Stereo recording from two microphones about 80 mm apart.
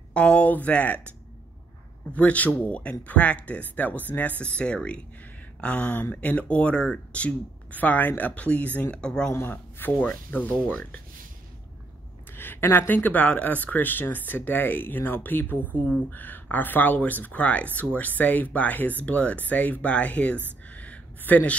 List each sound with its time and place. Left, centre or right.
0.1 s speech: centre
2.1 s speech: centre
9.3 s speech: left
12.3 s speech: left
20.6 s a sound: centre